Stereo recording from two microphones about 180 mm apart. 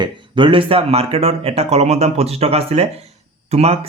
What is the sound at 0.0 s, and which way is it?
Speech, 25° right (ahead or behind).